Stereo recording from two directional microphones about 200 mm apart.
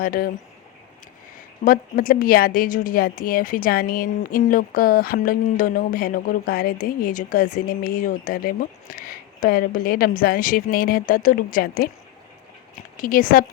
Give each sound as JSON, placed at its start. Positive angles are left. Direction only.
{"t": 0.0, "sound": "a woman's voice", "side_deg": 45}
{"t": 1.6, "sound": "a woman's voice", "side_deg": 45}
{"t": 13.0, "sound": "a woman's voice", "side_deg": 45}